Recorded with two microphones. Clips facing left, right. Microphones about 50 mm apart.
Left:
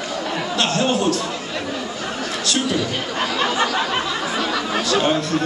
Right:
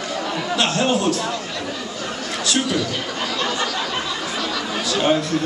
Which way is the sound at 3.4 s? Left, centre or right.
Centre.